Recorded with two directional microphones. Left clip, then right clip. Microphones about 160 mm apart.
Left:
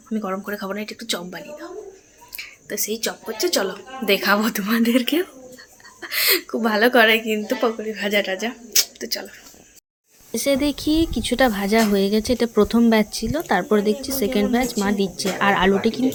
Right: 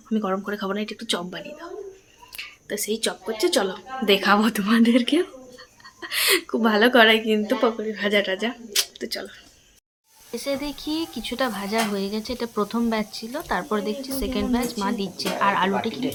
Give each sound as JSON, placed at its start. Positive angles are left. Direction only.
{"t": 0.1, "sound": "a woman's voice", "side_deg": -15}
{"t": 10.3, "sound": "speech", "side_deg": 45}